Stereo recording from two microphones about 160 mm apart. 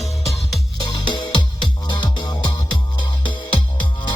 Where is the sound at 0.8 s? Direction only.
30° left (ahead or behind).